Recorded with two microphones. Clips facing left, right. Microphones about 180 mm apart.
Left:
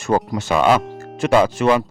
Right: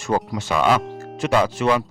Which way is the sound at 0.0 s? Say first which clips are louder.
Left 3 dB; 50° left (ahead or behind).